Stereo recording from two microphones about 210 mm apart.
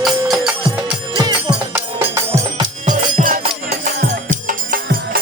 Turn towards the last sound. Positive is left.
turn(degrees=-45)  # may be behind; listen again after turning